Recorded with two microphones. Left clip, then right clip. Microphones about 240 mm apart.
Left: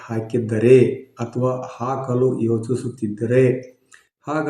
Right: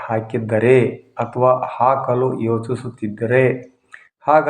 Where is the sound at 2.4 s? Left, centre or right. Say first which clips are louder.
Right 1 dB; right.